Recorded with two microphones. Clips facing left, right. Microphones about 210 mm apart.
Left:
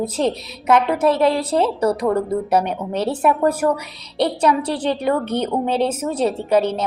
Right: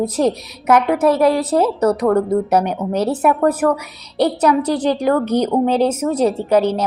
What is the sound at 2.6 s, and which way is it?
Speech, 30° left (ahead or behind).